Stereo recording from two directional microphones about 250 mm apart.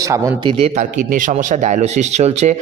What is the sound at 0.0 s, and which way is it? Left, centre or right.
Speech, centre.